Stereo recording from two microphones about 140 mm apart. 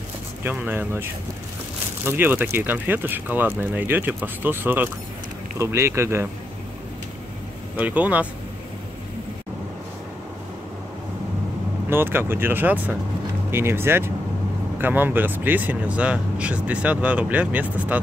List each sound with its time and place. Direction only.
0.4 s speech: 15° right (ahead or behind)
2.0 s speech: 15° right (ahead or behind)
7.7 s speech: 10° right (ahead or behind)
11.9 s speech: 15° right (ahead or behind)